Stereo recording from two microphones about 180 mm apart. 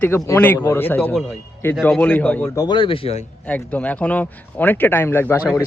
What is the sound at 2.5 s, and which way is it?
Speech, 25° left (ahead or behind).